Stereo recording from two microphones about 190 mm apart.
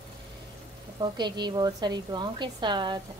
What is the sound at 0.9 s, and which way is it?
A woman's voice, 25° right (ahead or behind).